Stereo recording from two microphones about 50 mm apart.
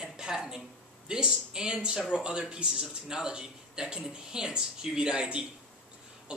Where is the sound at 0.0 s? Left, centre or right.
Centre.